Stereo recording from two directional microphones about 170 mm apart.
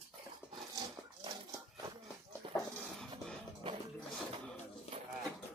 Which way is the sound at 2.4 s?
30° right (ahead or behind).